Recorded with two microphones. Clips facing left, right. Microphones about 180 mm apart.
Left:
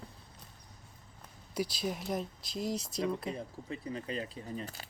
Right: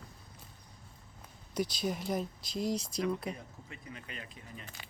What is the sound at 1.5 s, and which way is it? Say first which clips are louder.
Speech: right 1 dB; 5° left (ahead or behind).